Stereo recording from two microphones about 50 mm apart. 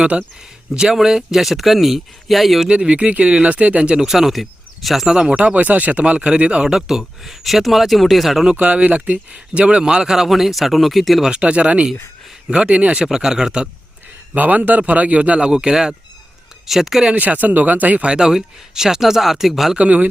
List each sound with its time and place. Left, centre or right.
0.0 s a man's voice: centre
0.9 s speech: centre
2.6 s a man's voice: right
4.0 s speech: centre
5.3 s a man's voice: right
6.7 s speech: centre
8.4 s speech: right; by 11.3 s centre
11.3 s a man's voice: right
13.1 s speech: centre
14.3 s a man's voice: right; by 17.1 s centre
17.2 s speech: right
18.1 s speech: centre
19.7 s a man's voice: right